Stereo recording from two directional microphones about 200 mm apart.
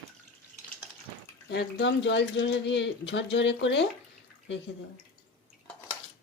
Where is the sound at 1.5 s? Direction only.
60° left (ahead or behind).